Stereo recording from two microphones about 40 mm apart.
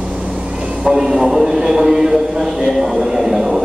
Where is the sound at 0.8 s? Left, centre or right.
Right.